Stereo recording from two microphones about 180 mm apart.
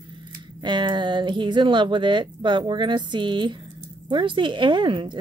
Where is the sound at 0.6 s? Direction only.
25° right (ahead or behind).